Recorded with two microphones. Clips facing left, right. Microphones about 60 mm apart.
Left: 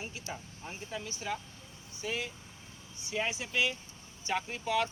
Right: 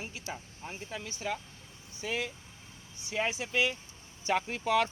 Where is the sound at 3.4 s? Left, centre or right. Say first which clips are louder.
Right 2 dB; right.